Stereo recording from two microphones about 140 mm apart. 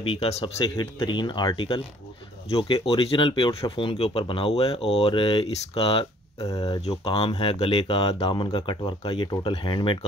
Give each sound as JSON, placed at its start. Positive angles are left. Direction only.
{"t": 0.0, "sound": "speech", "side_deg": 40}
{"t": 6.4, "sound": "speech", "side_deg": 25}
{"t": 6.8, "sound": "speech", "side_deg": 45}